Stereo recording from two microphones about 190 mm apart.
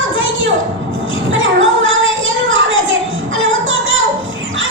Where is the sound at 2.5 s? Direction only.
90° right.